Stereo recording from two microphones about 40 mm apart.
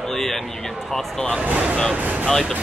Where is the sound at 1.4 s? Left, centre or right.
Right.